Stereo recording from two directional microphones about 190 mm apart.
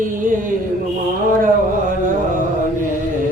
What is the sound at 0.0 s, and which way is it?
Mantra, 45° right (ahead or behind).